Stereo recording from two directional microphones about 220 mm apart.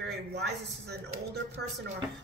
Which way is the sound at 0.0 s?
50° right (ahead or behind).